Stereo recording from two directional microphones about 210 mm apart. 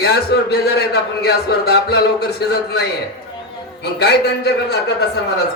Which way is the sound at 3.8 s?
50° left (ahead or behind).